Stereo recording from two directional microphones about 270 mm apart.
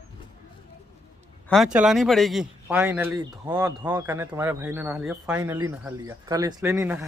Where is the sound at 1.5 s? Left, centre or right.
Centre.